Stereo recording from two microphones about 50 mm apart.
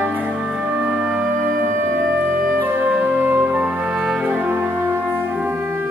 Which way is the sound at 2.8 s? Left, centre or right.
Right.